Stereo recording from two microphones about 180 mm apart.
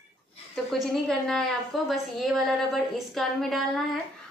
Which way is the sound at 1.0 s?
5° left (ahead or behind).